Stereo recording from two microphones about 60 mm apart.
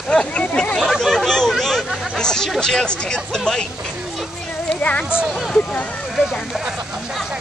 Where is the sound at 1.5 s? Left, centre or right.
Centre.